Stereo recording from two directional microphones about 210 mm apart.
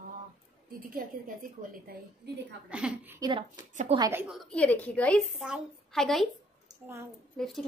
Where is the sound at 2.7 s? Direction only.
5° right (ahead or behind).